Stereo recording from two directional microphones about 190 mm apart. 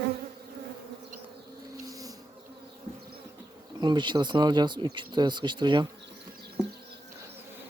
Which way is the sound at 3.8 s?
25° right (ahead or behind).